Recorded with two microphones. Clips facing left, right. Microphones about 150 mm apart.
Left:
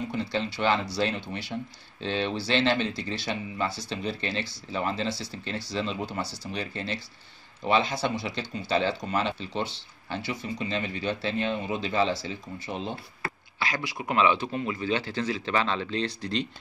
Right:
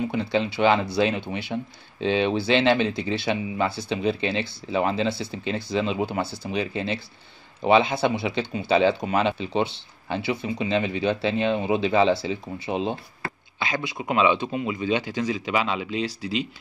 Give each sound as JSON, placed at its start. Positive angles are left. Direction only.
{"t": 0.1, "sound": "speech", "side_deg": -60}
{"t": 7.7, "sound": "speech", "side_deg": -55}
{"t": 13.6, "sound": "speech", "side_deg": -20}